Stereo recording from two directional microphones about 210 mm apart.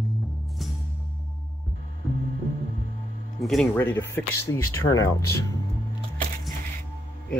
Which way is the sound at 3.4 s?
5° left (ahead or behind).